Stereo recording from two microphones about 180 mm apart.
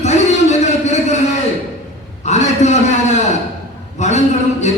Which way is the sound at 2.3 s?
40° left (ahead or behind).